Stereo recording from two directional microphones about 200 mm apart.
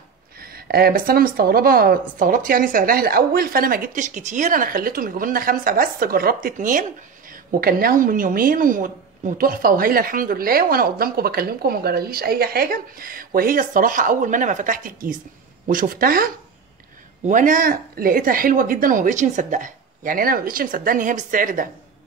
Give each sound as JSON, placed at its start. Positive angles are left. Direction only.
{"t": 0.4, "sound": "speech", "side_deg": -50}
{"t": 17.3, "sound": "speech", "side_deg": -40}